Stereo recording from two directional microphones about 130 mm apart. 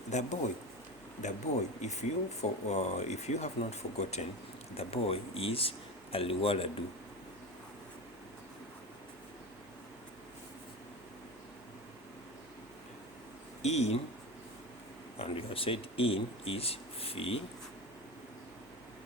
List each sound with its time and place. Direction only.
0.1 s speech: 65° left (ahead or behind)
1.8 s speech: 60° left (ahead or behind); by 6.7 s 45° left (ahead or behind)
13.6 s speech: 55° left (ahead or behind)
15.2 s speech: 45° left (ahead or behind)